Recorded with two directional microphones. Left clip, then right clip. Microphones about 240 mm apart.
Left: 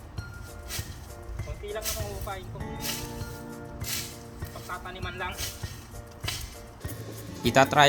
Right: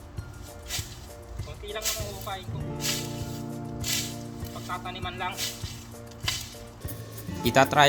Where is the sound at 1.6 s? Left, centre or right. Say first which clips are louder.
Right 2 dB; centre.